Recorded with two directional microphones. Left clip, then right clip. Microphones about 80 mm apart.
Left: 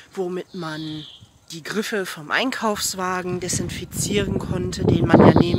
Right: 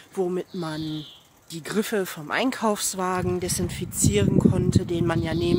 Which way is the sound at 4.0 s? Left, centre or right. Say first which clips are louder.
Right 2 dB; centre.